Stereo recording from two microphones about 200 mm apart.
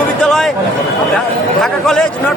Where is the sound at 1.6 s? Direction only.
Centre (ahead or behind).